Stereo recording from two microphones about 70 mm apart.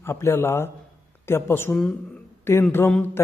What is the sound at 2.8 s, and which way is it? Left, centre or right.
Speech, left.